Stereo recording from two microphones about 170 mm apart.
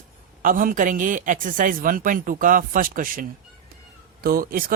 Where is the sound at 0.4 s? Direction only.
50° right (ahead or behind).